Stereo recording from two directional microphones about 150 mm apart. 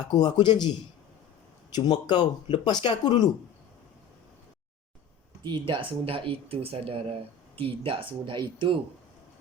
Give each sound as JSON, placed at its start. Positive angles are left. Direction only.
{"t": 0.0, "sound": "speech", "side_deg": 30}
{"t": 1.7, "sound": "speech", "side_deg": 30}
{"t": 5.5, "sound": "speech", "side_deg": -35}